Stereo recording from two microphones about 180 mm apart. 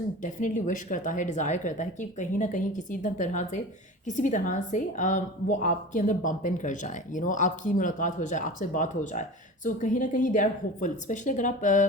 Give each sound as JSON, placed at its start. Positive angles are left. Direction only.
{"t": 0.2, "sound": "a woman's voice", "side_deg": 45}